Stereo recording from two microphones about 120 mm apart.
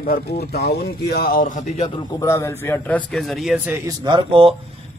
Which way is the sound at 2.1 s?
25° left (ahead or behind).